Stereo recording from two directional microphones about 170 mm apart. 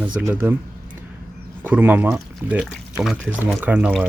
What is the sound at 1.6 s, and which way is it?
Speech, 10° right (ahead or behind).